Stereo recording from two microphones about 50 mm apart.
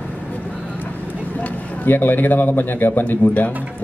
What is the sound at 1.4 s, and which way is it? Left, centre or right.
A man's voice, left.